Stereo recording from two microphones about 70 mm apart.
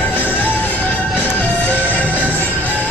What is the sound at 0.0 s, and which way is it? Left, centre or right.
Music, left.